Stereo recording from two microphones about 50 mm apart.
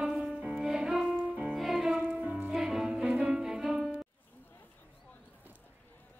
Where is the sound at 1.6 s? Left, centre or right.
Centre.